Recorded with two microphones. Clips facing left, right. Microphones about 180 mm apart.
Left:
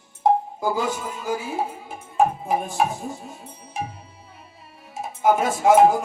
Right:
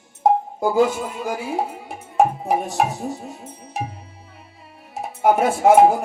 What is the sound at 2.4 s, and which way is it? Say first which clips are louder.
Music: right 2 dB; 75° right (ahead or behind).